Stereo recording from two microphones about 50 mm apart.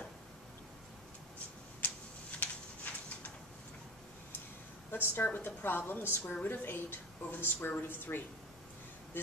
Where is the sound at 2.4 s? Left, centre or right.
Left.